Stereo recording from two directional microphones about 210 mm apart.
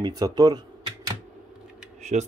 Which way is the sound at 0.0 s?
20° right (ahead or behind).